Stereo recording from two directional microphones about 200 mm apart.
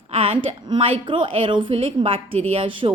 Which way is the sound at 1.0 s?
25° right (ahead or behind).